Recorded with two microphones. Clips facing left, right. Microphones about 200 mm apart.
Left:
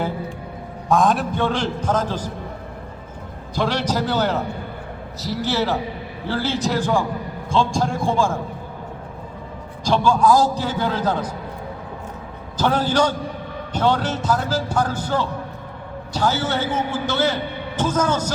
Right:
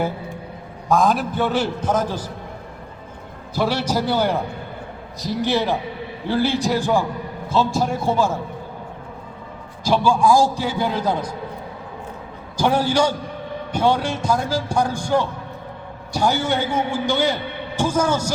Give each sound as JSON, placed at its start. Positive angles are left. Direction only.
{"t": 0.9, "sound": "speech", "side_deg": 0}
{"t": 3.5, "sound": "speech", "side_deg": -10}
{"t": 9.8, "sound": "speech", "side_deg": -10}
{"t": 12.5, "sound": "speech", "side_deg": -10}